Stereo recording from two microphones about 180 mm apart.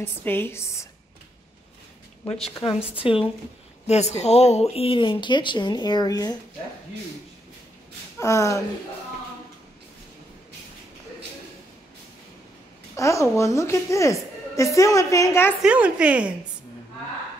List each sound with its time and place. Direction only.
0.0 s a woman's voice: 10° left (ahead or behind)
3.0 s speech: 30° left (ahead or behind)
8.2 s a woman's voice: 15° left (ahead or behind)
12.9 s a woman's voice: 15° left (ahead or behind)
15.6 s a woman's voice: 5° right (ahead or behind)